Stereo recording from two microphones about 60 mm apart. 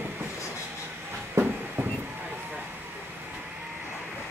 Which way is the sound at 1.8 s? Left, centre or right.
Right.